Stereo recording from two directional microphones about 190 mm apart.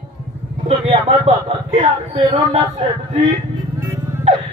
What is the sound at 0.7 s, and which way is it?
Speech, 30° right (ahead or behind).